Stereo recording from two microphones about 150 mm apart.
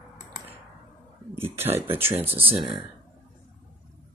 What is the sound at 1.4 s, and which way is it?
Speech, 15° right (ahead or behind).